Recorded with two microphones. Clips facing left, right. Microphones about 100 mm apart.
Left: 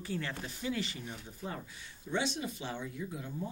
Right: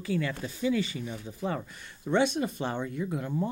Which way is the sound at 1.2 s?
90° right.